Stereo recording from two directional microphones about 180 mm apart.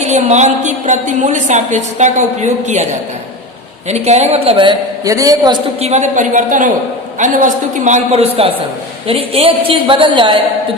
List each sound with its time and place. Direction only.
0.0 s a woman's voice: 40° right (ahead or behind)
3.8 s a man's voice: 40° right (ahead or behind); by 5.5 s 20° right (ahead or behind)
5.8 s a woman's voice: 40° right (ahead or behind)